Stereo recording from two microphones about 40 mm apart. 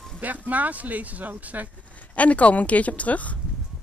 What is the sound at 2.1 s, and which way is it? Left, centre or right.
Speech, left.